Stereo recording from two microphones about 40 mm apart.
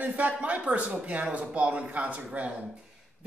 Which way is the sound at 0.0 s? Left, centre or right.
Right.